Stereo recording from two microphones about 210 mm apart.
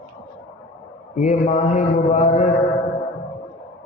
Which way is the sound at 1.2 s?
35° left (ahead or behind).